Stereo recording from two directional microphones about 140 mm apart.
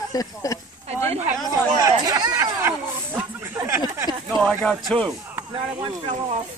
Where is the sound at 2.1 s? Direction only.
25° right (ahead or behind).